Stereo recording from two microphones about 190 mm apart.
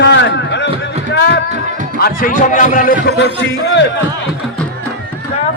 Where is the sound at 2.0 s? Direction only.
50° left (ahead or behind).